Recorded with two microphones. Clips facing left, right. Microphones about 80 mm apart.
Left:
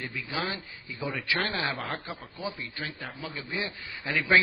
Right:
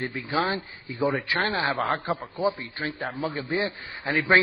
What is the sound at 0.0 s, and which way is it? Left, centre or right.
A man's voice, right.